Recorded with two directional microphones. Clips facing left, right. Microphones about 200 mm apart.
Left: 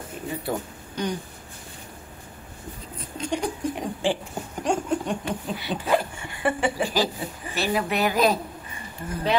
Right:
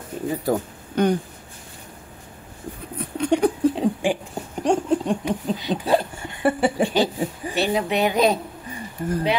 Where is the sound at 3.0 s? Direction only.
65° right (ahead or behind).